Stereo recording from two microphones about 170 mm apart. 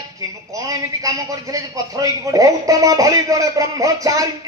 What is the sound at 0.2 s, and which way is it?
Speech, 20° right (ahead or behind).